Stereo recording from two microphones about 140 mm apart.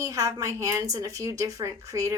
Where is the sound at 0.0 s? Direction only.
25° right (ahead or behind).